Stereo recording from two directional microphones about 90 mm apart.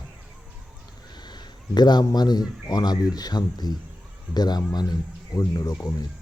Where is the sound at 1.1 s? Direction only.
55° left (ahead or behind).